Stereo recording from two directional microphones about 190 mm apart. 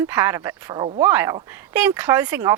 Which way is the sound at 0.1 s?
10° right (ahead or behind).